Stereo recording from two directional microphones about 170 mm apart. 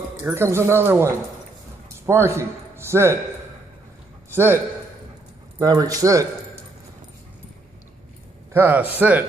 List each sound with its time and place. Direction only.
0.2 s a man's voice: 15° right (ahead or behind)
5.6 s a man's voice: 20° right (ahead or behind)
8.5 s speech: 10° right (ahead or behind)